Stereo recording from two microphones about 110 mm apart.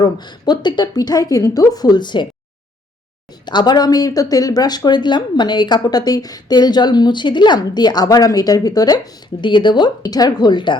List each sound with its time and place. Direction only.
0.0 s speech: 40° left (ahead or behind)
3.4 s speech: 40° left (ahead or behind)